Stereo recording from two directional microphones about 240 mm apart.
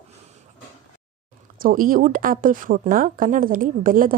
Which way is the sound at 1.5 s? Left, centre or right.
Right.